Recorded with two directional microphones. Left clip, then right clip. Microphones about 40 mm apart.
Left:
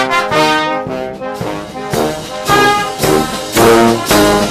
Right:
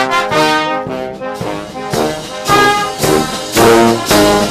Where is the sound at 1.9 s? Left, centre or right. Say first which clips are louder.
Even; centre.